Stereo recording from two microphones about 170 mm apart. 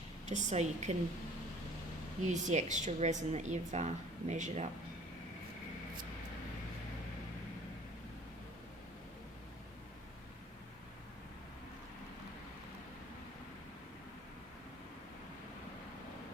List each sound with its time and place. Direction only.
0.3 s a woman's voice: 45° right (ahead or behind)
2.2 s a woman's voice: 45° right (ahead or behind)